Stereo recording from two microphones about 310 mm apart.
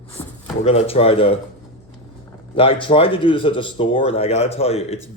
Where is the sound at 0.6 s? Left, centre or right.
Centre.